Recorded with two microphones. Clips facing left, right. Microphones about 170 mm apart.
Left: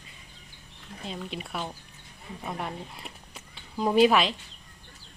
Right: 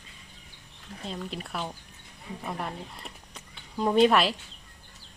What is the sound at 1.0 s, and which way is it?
Speech, centre (ahead or behind).